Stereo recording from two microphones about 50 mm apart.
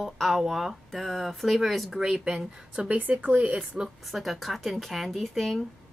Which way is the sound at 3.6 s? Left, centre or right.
Centre.